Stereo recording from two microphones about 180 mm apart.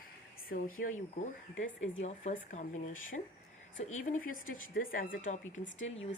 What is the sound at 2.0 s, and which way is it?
A woman's voice, 35° left (ahead or behind).